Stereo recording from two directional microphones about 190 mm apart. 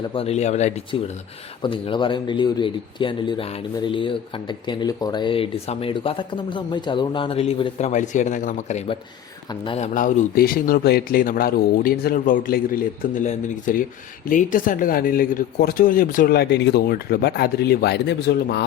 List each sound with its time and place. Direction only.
0.1 s speech: 30° left (ahead or behind)
1.6 s speech: 25° left (ahead or behind); by 18.6 s 60° left (ahead or behind)